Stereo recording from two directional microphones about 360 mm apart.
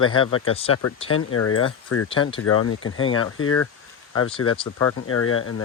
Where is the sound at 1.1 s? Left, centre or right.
Left.